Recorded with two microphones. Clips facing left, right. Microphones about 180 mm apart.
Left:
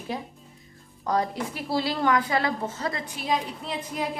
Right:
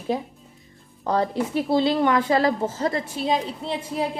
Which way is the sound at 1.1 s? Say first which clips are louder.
Right 4 dB; 30° right (ahead or behind).